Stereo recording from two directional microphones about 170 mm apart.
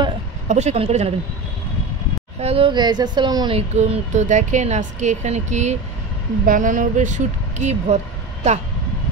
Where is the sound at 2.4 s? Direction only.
35° right (ahead or behind).